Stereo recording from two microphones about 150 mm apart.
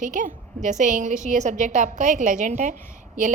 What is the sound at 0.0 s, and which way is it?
A woman's voice, 55° right (ahead or behind).